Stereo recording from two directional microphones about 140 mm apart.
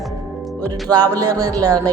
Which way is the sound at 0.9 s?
25° right (ahead or behind).